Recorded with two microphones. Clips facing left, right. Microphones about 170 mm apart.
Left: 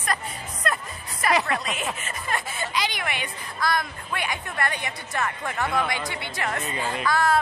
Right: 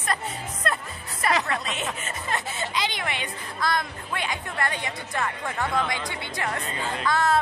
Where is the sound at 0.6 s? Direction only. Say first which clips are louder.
Left 1 dB; 30° right (ahead or behind).